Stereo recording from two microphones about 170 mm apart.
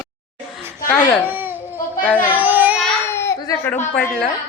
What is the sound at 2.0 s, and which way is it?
Speech, 10° left (ahead or behind).